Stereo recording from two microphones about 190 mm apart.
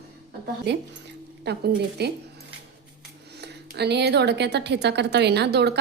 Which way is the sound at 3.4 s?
60° right (ahead or behind).